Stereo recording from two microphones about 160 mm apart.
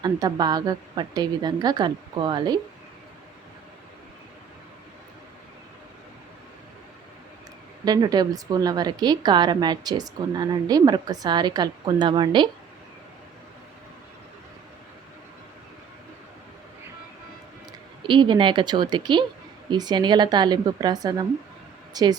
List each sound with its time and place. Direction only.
0.0 s a woman's voice: 25° right (ahead or behind)
7.9 s a woman's voice: 25° right (ahead or behind)
17.7 s a woman's voice: 30° right (ahead or behind)